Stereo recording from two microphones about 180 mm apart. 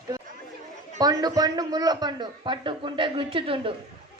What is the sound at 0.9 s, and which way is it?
A man's voice, 20° right (ahead or behind).